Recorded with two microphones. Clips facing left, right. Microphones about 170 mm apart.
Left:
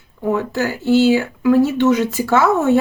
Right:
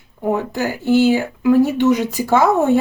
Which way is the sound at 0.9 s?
50° right (ahead or behind).